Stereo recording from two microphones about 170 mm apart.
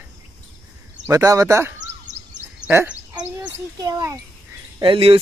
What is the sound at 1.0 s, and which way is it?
Speech, 20° right (ahead or behind).